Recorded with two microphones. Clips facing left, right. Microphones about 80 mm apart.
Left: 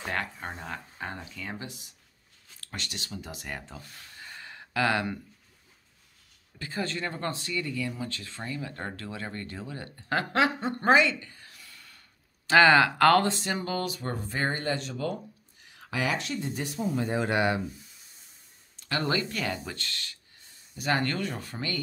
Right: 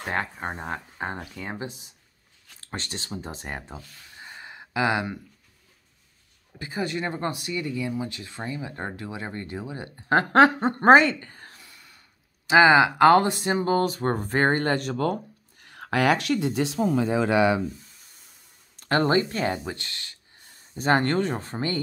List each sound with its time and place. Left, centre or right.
0.1 s speech: right
2.6 s speech: right; by 5.2 s centre
6.6 s speech: centre
10.1 s speech: right
11.6 s a sound: centre
12.4 s speech: centre; by 16.9 s right
18.8 s speech: right
20.7 s speech: right